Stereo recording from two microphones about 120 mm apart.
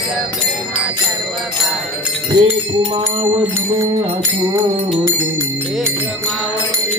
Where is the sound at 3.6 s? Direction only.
25° right (ahead or behind).